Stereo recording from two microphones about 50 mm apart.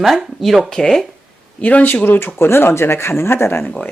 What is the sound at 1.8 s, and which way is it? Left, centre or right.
Speech, left.